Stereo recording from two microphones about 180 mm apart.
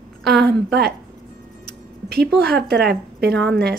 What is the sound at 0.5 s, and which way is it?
Speech, 65° right (ahead or behind).